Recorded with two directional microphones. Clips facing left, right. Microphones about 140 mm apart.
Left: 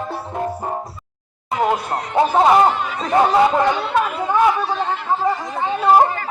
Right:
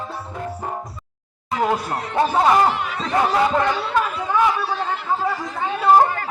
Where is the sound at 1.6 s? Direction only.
15° left (ahead or behind).